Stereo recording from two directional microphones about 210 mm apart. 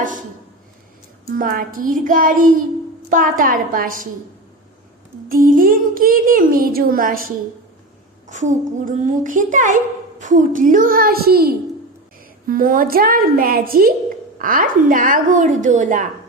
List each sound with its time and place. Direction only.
0.0 s a sound: 40° right (ahead or behind)
1.3 s a child's voice: 40° right (ahead or behind)
5.3 s a child's voice: 40° right (ahead or behind)